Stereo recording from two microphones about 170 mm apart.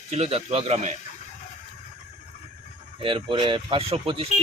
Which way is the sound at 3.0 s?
30° right (ahead or behind).